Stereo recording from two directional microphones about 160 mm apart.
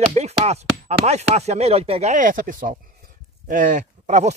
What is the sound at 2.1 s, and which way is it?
Speech, 55° right (ahead or behind).